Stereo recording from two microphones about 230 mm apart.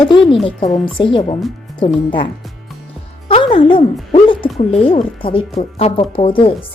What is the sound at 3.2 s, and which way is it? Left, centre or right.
A woman's voice, left.